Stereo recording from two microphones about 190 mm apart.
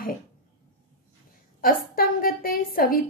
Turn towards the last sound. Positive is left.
turn(degrees=50)  # may be behind; listen again after turning